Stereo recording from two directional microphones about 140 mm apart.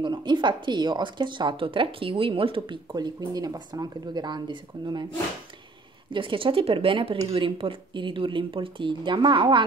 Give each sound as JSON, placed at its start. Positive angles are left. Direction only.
{"t": 0.0, "sound": "speech", "side_deg": -35}
{"t": 6.1, "sound": "speech", "side_deg": -40}